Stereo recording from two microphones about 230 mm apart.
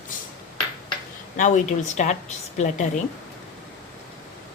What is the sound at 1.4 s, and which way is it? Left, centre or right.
A woman's voice, left.